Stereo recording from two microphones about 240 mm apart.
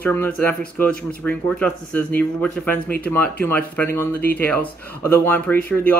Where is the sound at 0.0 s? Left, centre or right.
Centre.